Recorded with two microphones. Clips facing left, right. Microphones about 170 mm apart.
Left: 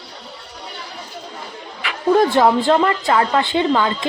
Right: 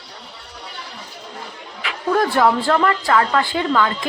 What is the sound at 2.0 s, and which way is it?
Speech, 25° left (ahead or behind).